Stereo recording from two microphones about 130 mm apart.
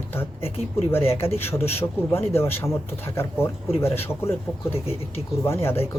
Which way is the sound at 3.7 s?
20° left (ahead or behind).